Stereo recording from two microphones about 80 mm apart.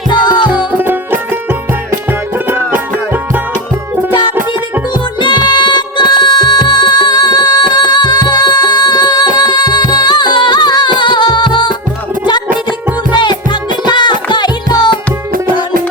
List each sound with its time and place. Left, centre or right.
0.1 s music: left
0.5 s music: right
5.2 s music: left
13.1 s music: left